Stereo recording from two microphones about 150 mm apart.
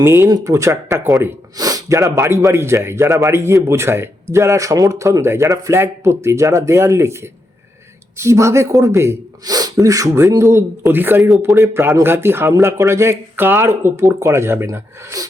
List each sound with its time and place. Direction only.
0.0 s speech: 15° right (ahead or behind)